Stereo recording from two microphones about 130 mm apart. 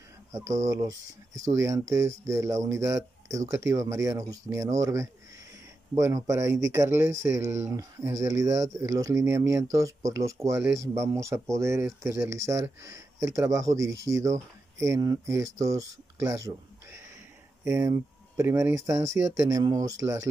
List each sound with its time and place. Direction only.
0.3 s speech: 25° right (ahead or behind)